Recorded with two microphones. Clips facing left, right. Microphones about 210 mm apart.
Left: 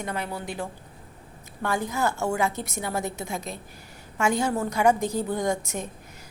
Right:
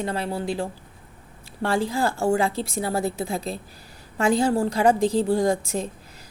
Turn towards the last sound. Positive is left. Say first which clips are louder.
# right 5 dB
turn(degrees=-30)  # may be behind; listen again after turning